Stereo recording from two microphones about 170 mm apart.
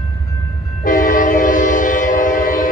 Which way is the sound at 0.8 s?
55° left (ahead or behind).